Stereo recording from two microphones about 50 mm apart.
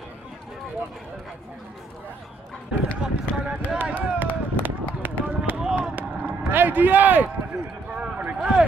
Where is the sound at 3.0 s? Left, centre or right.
Right.